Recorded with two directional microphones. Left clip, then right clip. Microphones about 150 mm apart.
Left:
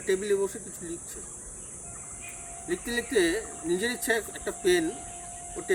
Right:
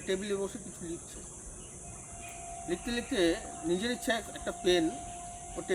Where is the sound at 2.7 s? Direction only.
10° right (ahead or behind).